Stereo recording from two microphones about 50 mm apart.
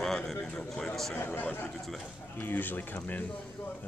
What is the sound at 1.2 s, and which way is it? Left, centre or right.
Speech, left.